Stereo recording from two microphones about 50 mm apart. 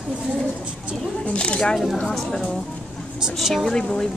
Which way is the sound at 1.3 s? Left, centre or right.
Left.